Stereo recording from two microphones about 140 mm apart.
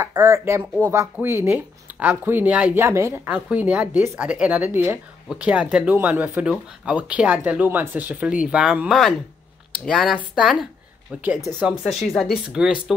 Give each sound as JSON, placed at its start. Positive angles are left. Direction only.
{"t": 0.2, "sound": "speech", "side_deg": -15}